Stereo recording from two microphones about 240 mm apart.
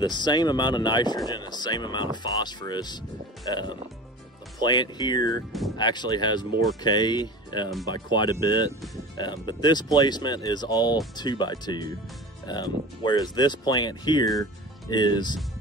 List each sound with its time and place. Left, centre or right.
0.0 s speech: centre